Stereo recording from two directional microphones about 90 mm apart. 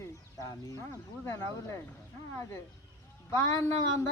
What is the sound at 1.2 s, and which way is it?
Speech, 30° left (ahead or behind).